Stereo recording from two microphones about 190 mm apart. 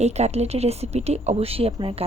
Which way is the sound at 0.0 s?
35° right (ahead or behind).